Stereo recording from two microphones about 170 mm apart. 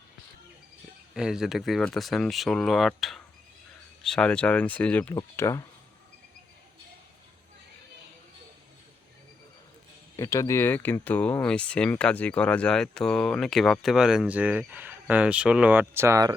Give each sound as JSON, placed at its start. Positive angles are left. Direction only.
{"t": 1.1, "sound": "speech", "side_deg": -5}
{"t": 5.1, "sound": "speech", "side_deg": 20}
{"t": 10.2, "sound": "speech", "side_deg": 15}